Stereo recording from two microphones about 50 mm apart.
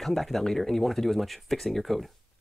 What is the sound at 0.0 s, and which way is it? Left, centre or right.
Speech, centre.